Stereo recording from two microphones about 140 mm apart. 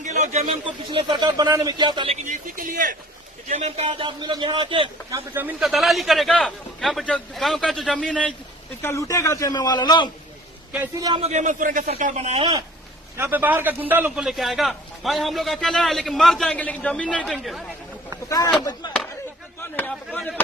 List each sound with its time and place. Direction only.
0.0 s a sound: 55° right (ahead or behind)
0.6 s speech: 35° right (ahead or behind)
2.2 s a man's voice: 70° right (ahead or behind)
3.5 s speech: 50° right (ahead or behind); by 4.9 s 35° right (ahead or behind)
5.1 s a man's voice: 15° right (ahead or behind)
5.6 s a man's voice: centre (ahead or behind)
8.8 s a man's voice: 20° left (ahead or behind)
11.2 s a man's voice: 55° right (ahead or behind)
11.9 s a man's voice: 55° right (ahead or behind)
13.1 s a man's voice: 15° right (ahead or behind)
14.3 s a man's voice: centre (ahead or behind)
18.3 s a man's voice: 25° left (ahead or behind)
19.9 s speech: 5° left (ahead or behind)